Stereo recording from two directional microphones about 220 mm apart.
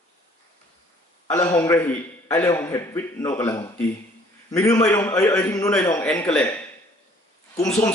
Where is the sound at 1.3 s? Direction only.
10° left (ahead or behind).